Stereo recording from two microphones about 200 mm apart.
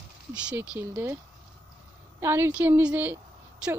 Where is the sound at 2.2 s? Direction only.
10° right (ahead or behind).